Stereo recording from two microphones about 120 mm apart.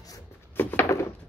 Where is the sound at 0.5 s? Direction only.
20° left (ahead or behind).